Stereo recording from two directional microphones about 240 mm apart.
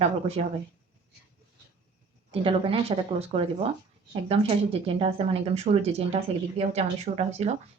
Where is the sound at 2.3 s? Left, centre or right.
Right.